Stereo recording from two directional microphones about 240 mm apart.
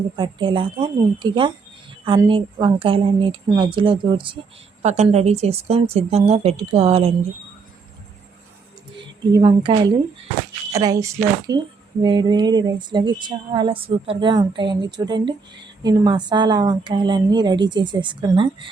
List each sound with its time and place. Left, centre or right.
0.2 s speech: centre
9.3 s a woman's voice: centre